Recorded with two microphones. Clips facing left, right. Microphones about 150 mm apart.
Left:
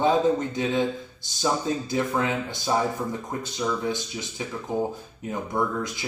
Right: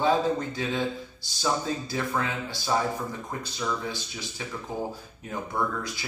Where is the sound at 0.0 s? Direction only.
20° left (ahead or behind).